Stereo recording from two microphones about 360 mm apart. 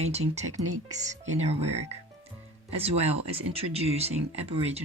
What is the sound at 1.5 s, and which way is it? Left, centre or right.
Speech, right.